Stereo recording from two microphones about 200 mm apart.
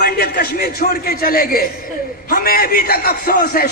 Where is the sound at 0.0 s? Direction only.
50° left (ahead or behind).